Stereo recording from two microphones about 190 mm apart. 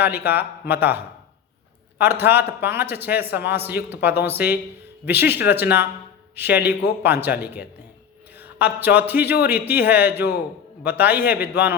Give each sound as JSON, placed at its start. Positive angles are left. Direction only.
{"t": 0.0, "sound": "a man's voice", "side_deg": -10}